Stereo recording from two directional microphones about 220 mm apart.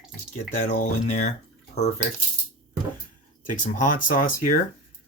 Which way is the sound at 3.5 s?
35° left (ahead or behind).